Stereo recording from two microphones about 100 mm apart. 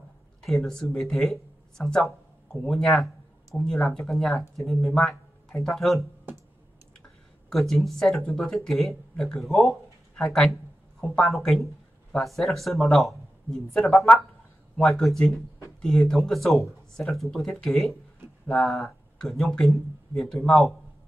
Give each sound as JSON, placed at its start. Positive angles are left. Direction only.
{"t": 0.4, "sound": "speech", "side_deg": 0}
{"t": 4.9, "sound": "a sound", "side_deg": 5}
{"t": 5.8, "sound": "speech", "side_deg": 0}
{"t": 7.4, "sound": "speech", "side_deg": 5}